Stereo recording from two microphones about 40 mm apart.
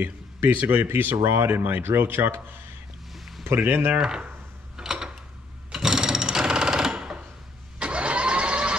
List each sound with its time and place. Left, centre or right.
0.0 s speech: right
0.6 s speech: right
0.8 s speech: right
3.4 s speech: right
4.7 s a sound: centre
5.7 s sewing machine: centre
7.8 s vehicle: right